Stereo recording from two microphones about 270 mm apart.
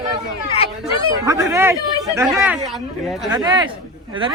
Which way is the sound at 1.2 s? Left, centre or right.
Centre.